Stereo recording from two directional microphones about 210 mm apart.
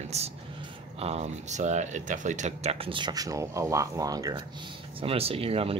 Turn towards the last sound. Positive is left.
turn(degrees=-25)  # may be behind; listen again after turning